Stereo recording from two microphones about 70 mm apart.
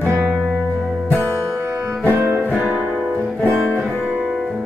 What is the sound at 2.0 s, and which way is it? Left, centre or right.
Music, right.